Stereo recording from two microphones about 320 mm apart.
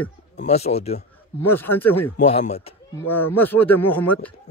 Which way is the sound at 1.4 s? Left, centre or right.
Centre.